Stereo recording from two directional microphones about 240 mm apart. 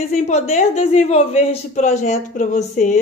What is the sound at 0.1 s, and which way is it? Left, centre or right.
Speech, left.